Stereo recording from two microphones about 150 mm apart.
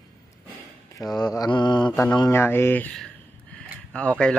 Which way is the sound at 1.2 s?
25° left (ahead or behind).